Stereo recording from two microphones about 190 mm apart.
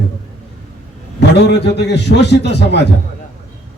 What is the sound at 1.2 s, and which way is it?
A man's voice, 65° left (ahead or behind).